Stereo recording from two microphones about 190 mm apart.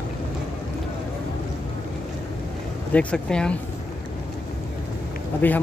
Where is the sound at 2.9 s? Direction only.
5° left (ahead or behind).